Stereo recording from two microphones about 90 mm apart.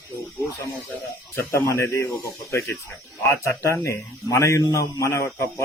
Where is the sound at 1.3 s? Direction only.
30° left (ahead or behind).